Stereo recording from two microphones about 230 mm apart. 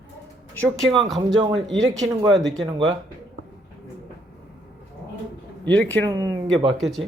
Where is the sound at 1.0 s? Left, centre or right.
Centre.